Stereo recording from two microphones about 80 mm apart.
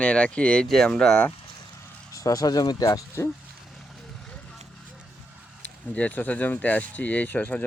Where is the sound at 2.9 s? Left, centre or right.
Left.